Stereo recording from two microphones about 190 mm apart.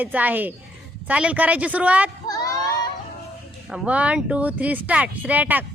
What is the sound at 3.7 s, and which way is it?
Speech, 5° right (ahead or behind).